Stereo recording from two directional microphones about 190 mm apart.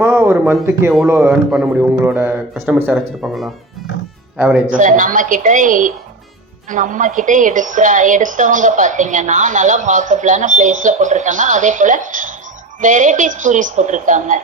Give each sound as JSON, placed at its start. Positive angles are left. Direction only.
{"t": 0.0, "sound": "speech", "side_deg": -10}
{"t": 4.7, "sound": "a woman's voice", "side_deg": -45}